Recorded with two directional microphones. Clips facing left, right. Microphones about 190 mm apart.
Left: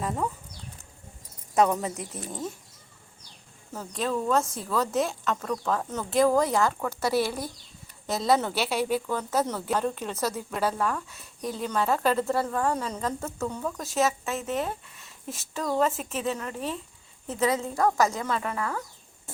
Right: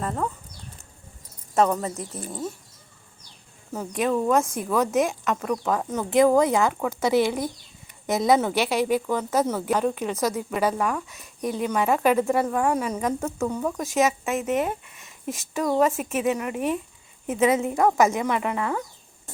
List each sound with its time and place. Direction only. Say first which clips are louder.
0.0 s speech: right 2 dB; 5° left (ahead or behind)
1.5 s speech: right 1 dB; 5° left (ahead or behind)
3.7 s a woman's voice: right 5 dB; 15° right (ahead or behind)